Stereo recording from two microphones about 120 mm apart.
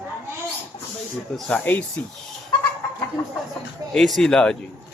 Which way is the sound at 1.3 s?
10° left (ahead or behind).